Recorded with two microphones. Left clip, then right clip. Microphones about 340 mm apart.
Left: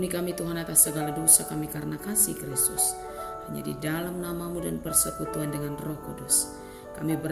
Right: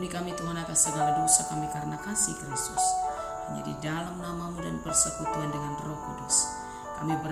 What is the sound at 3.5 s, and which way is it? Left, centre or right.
Speech, centre.